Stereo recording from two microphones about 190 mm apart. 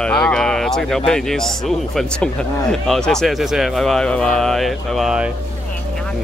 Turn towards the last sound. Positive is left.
turn(degrees=-5)  # may be behind; listen again after turning